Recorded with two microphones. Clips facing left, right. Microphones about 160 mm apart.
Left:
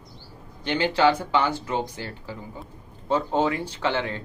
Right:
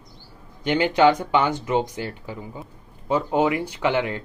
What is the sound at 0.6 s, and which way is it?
Speech, 15° right (ahead or behind).